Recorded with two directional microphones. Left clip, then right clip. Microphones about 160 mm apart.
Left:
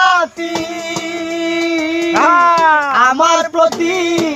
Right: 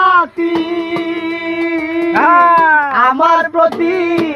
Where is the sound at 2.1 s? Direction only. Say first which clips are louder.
Right 2 dB; 10° left (ahead or behind).